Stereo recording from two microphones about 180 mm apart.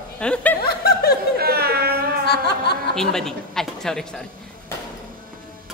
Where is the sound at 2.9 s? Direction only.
5° left (ahead or behind).